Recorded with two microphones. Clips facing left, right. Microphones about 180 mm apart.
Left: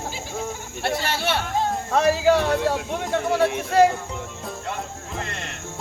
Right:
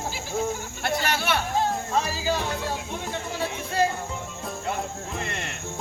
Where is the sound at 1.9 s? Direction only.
65° left (ahead or behind).